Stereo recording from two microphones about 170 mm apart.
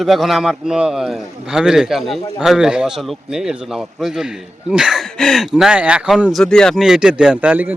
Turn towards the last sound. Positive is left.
turn(degrees=-10)  # may be behind; listen again after turning